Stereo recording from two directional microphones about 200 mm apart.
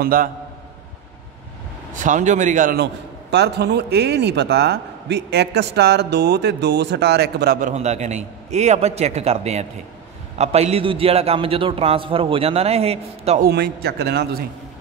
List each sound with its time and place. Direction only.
0.0 s a man's voice: 45° right (ahead or behind)
2.0 s a man's voice: 40° right (ahead or behind); by 7.5 s 55° right (ahead or behind)
7.6 s a man's voice: 35° right (ahead or behind)
13.4 s a man's voice: 55° right (ahead or behind)